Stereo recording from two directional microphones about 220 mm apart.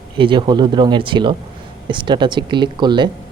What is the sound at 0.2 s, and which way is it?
Speech, 20° right (ahead or behind).